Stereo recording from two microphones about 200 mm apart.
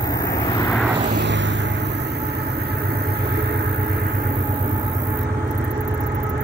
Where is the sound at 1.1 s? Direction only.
60° right (ahead or behind).